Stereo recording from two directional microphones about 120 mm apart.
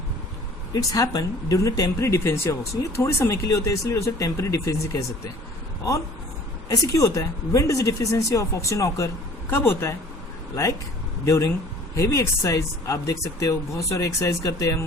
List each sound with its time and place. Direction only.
0.7 s speech: 30° left (ahead or behind)
6.7 s speech: 25° left (ahead or behind)